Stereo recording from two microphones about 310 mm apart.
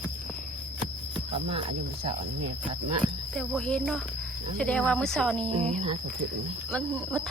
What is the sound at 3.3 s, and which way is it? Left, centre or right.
Speech, centre.